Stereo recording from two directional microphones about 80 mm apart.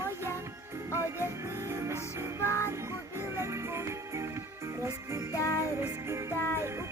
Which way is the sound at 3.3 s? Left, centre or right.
Right.